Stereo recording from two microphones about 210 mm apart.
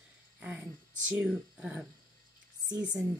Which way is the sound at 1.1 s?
5° right (ahead or behind).